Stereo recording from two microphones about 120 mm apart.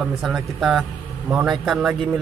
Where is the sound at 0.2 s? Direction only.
Centre (ahead or behind).